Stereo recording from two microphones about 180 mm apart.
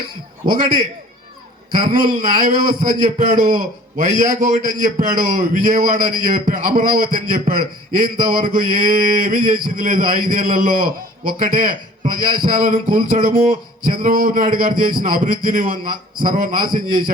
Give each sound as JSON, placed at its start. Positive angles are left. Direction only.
{"t": 0.5, "sound": "a man's voice", "side_deg": -50}